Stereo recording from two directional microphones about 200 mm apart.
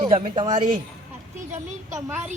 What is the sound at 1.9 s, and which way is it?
Speech, 10° right (ahead or behind).